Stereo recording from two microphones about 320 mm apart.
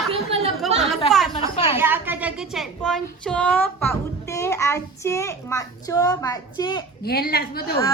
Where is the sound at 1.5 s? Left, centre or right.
Centre.